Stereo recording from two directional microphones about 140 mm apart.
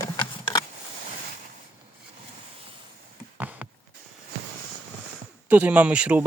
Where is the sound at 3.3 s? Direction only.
10° right (ahead or behind).